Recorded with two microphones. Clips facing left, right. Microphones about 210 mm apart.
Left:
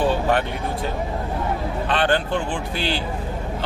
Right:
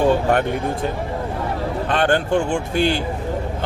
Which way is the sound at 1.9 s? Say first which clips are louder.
Right 3 dB; 45° right (ahead or behind).